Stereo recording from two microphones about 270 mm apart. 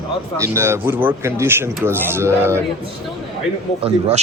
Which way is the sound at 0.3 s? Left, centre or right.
Centre.